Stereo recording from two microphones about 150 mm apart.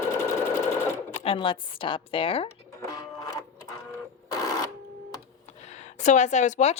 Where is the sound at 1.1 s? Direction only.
40° left (ahead or behind).